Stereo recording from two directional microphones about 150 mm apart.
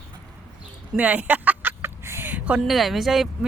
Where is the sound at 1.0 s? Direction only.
10° right (ahead or behind).